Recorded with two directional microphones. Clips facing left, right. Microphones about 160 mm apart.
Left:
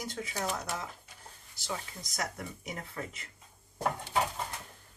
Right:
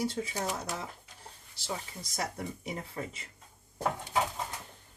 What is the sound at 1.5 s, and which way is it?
Speech, 30° right (ahead or behind).